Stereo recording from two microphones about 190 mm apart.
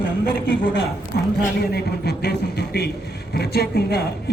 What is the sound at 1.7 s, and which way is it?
Speech, 60° left (ahead or behind).